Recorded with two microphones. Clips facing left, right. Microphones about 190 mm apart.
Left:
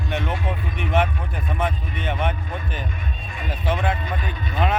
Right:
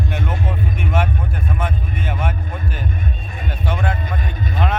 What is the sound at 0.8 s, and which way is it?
Vehicle, centre (ahead or behind).